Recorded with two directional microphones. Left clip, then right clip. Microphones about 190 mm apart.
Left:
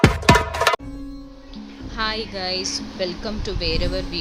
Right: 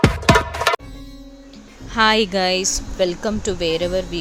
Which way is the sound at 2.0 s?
50° right (ahead or behind).